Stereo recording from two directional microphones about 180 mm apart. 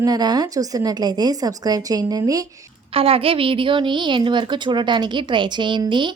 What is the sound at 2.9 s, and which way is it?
A woman's voice, 30° right (ahead or behind).